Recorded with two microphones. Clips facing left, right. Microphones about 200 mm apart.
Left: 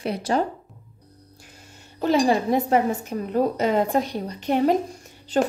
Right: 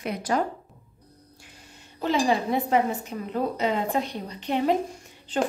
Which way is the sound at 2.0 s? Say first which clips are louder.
Left 4 dB; 40° left (ahead or behind).